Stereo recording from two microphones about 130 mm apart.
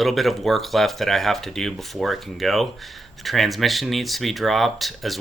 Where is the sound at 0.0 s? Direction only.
Centre (ahead or behind).